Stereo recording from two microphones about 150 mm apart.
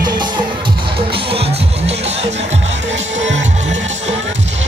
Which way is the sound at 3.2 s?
50° right (ahead or behind).